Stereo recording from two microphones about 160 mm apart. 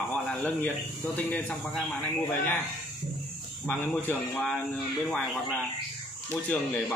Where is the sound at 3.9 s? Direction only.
5° left (ahead or behind).